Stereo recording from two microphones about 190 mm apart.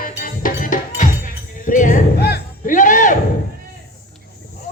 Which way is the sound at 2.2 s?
50° left (ahead or behind).